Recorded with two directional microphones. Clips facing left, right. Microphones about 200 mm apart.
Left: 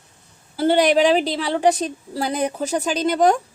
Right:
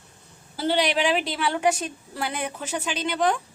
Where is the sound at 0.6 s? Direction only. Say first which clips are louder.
Left 7 dB; 50° left (ahead or behind).